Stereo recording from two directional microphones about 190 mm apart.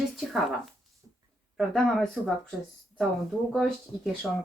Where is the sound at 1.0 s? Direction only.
20° right (ahead or behind).